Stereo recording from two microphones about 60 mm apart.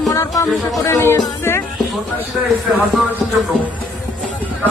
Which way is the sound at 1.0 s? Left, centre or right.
Left.